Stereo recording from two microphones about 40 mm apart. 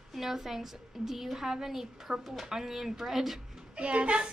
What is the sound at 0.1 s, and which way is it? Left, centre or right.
A woman's voice, centre.